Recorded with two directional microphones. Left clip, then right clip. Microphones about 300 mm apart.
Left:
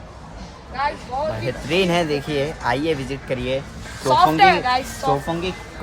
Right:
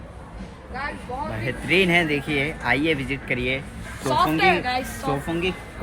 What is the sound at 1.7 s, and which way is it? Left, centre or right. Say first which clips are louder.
Speech: even; centre.